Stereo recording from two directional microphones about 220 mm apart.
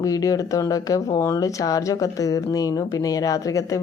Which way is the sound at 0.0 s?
15° left (ahead or behind).